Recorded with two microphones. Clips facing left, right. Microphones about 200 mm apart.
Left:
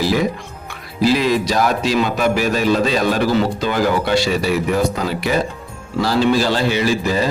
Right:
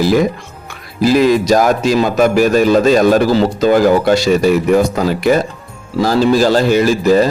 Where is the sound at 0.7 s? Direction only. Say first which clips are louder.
Right 4 dB; 45° right (ahead or behind).